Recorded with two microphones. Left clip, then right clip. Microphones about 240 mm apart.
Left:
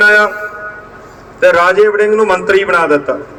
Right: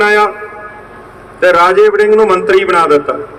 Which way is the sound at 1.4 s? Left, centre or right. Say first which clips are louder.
Right 1 dB; centre.